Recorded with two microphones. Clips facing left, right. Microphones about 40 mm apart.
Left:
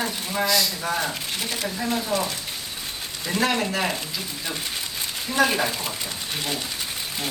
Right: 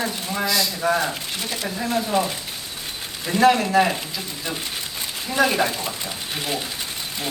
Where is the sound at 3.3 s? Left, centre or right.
Centre.